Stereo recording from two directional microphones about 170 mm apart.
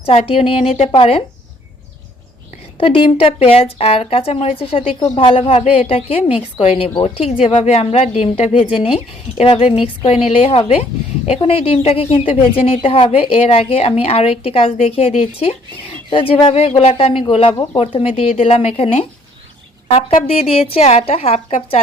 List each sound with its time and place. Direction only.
0.0 s speech: 35° left (ahead or behind)
2.7 s speech: 30° left (ahead or behind)